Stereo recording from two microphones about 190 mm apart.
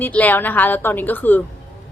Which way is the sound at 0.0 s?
10° left (ahead or behind).